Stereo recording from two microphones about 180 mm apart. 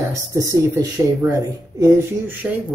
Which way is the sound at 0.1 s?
15° right (ahead or behind).